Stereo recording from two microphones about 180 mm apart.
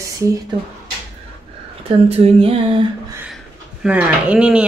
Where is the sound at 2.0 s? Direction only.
35° right (ahead or behind).